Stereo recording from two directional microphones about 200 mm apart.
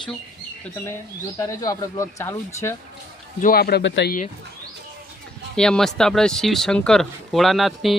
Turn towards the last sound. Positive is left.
turn(degrees=0)  # may be behind; listen again after turning